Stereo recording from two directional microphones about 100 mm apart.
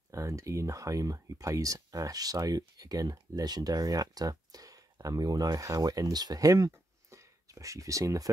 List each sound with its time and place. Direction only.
0.1 s speech: 30° right (ahead or behind)